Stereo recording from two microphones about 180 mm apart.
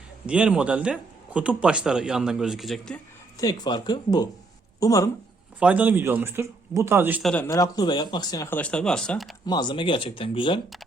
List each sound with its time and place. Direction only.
0.3 s speech: 5° right (ahead or behind)
3.3 s speech: 20° left (ahead or behind)
5.5 s speech: 10° right (ahead or behind)
7.2 s speech: 5° left (ahead or behind)
7.4 s speech: 20° left (ahead or behind)
8.4 s speech: 10° left (ahead or behind)
9.5 s speech: 25° left (ahead or behind)